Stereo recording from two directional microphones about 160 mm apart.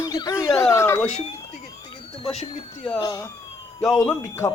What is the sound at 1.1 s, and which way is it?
Speech, 40° left (ahead or behind).